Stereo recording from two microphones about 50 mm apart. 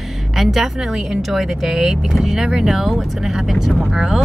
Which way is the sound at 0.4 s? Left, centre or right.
Centre.